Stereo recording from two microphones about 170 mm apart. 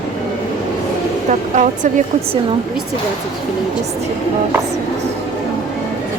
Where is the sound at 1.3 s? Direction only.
45° right (ahead or behind).